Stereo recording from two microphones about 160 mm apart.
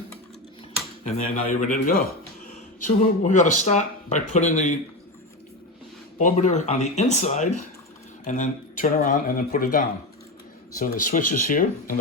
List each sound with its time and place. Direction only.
1.0 s speech: 45° left (ahead or behind)
6.1 s speech: 50° left (ahead or behind)